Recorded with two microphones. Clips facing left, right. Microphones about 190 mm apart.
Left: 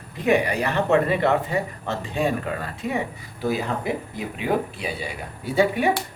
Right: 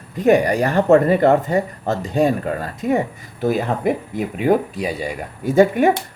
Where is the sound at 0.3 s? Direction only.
45° right (ahead or behind).